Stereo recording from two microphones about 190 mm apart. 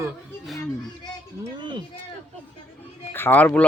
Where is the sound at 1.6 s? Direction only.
25° right (ahead or behind).